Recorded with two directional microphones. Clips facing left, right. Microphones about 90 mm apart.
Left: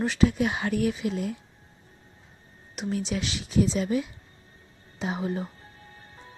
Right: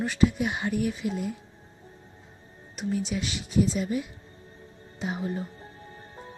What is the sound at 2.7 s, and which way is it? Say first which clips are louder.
Speech: even; 80° left.